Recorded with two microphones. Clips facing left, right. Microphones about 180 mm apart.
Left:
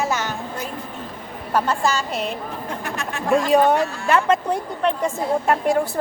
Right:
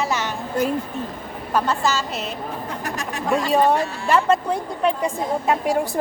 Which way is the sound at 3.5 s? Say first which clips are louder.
Even; centre (ahead or behind).